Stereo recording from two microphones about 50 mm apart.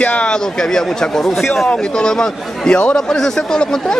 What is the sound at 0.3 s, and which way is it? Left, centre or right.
A man's voice, centre.